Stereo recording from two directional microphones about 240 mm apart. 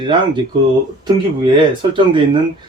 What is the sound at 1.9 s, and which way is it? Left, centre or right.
Speech, centre.